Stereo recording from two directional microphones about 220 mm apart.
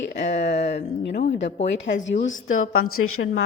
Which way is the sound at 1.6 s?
55° left (ahead or behind).